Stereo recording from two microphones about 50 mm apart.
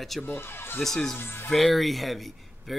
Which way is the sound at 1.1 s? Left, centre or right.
Left.